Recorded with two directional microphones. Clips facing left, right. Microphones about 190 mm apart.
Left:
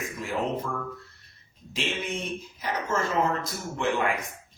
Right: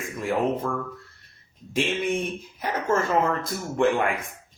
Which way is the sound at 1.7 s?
50° right (ahead or behind).